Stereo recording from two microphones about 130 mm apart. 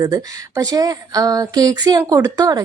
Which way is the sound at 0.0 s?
25° right (ahead or behind).